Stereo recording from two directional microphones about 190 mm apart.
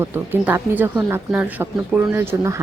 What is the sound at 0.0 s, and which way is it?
Speech, 10° right (ahead or behind).